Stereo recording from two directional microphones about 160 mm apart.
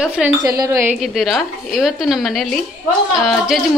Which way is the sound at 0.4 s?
20° right (ahead or behind).